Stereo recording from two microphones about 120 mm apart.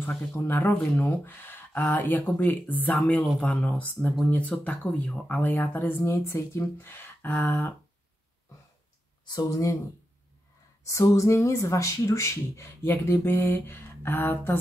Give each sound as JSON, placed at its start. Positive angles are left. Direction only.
{"t": 0.4, "sound": "speech", "side_deg": 20}
{"t": 9.2, "sound": "speech", "side_deg": 30}
{"t": 10.9, "sound": "speech", "side_deg": 25}